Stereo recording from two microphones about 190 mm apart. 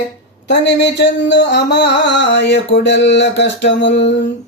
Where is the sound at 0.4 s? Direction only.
65° left (ahead or behind).